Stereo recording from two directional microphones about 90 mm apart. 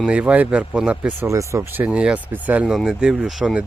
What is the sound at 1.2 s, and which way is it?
Speech, 35° right (ahead or behind).